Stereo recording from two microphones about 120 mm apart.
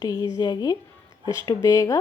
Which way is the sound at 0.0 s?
30° left (ahead or behind).